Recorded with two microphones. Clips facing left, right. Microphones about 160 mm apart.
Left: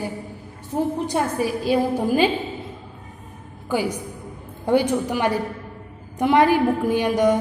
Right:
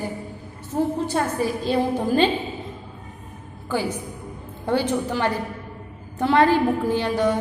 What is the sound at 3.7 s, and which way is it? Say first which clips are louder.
A woman's voice: left 2 dB; 10° left (ahead or behind).